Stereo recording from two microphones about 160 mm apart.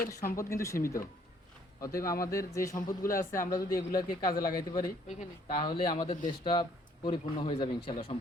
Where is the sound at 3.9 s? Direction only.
25° left (ahead or behind).